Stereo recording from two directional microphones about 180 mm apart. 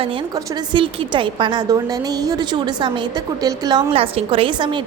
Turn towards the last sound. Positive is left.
turn(degrees=-25)  # may be behind; listen again after turning